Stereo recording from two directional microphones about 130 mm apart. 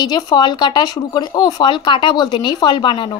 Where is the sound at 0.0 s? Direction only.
35° left (ahead or behind).